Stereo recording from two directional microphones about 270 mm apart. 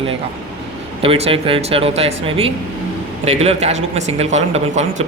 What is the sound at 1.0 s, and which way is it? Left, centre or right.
Speech, right.